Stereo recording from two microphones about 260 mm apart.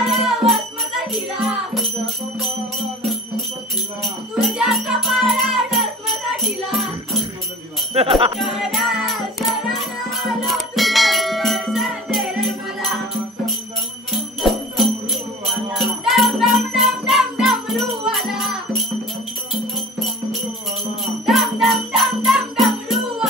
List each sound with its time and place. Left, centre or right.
0.0 s music: centre
4.0 s music: centre
7.9 s music: right
8.4 s music: centre
14.1 s music: centre
21.0 s jingle bell: centre